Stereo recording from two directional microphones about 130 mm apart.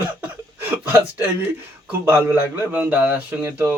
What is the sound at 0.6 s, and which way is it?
Speech, 15° right (ahead or behind).